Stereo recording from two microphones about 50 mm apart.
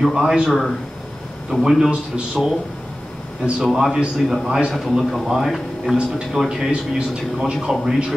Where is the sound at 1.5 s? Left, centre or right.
Left.